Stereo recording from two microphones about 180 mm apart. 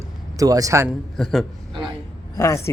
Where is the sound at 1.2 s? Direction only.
Centre (ahead or behind).